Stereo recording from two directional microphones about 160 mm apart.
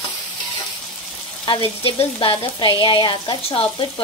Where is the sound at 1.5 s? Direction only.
35° left (ahead or behind).